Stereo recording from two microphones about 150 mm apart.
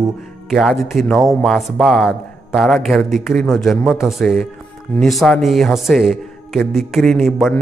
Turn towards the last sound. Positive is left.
turn(degrees=0)  # may be behind; listen again after turning